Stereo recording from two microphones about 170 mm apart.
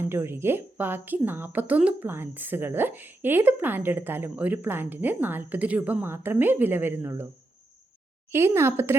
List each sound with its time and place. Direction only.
0.0 s a woman's voice: 15° right (ahead or behind)
8.3 s a woman's voice: 15° right (ahead or behind)